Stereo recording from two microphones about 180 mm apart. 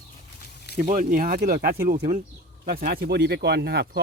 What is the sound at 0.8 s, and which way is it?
Speech, 45° right (ahead or behind).